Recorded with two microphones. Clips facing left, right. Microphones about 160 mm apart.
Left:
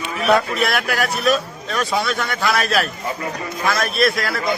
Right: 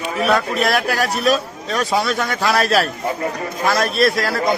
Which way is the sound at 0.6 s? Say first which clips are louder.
Right 2 dB; 35° right (ahead or behind).